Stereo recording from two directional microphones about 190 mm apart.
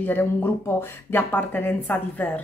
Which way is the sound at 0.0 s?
10° left (ahead or behind).